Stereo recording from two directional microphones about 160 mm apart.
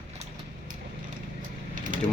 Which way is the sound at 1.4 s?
55° right (ahead or behind).